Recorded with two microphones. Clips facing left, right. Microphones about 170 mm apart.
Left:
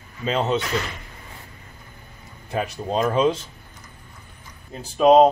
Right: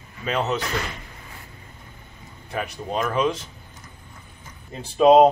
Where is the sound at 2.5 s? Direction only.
25° left (ahead or behind).